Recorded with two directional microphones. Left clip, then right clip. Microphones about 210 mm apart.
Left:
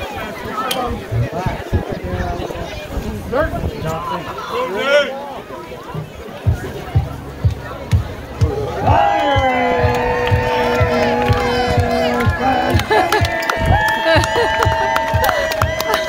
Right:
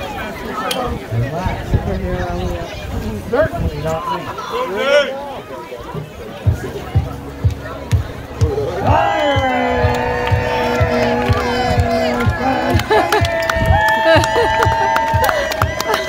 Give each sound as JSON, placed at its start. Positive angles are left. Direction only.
{"t": 3.3, "sound": "speech", "side_deg": -50}
{"t": 4.6, "sound": "speech", "side_deg": 0}
{"t": 8.8, "sound": "crowd", "side_deg": -20}
{"t": 9.9, "sound": "music", "side_deg": -15}
{"t": 13.5, "sound": "run", "side_deg": 5}
{"t": 14.0, "sound": "a sound", "side_deg": -5}